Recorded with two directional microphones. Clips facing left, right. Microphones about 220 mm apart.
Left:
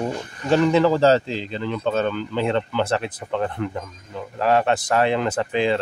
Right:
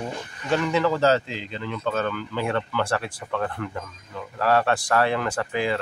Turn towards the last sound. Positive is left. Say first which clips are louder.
# left 4 dB
turn(degrees=25)  # may be behind; listen again after turning